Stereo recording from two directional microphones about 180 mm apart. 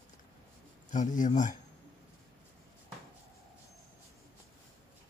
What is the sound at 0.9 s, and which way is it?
Speech, 45° left (ahead or behind).